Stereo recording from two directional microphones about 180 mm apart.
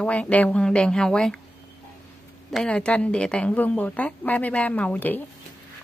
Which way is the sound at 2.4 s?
5° left (ahead or behind).